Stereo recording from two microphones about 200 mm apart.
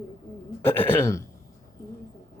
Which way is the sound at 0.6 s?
10° left (ahead or behind).